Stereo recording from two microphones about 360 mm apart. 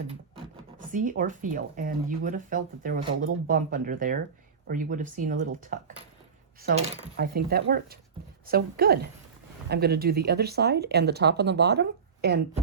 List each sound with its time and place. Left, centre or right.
0.9 s speech: right